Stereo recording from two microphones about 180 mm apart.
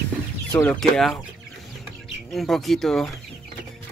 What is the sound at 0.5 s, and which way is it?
Speech, 5° left (ahead or behind).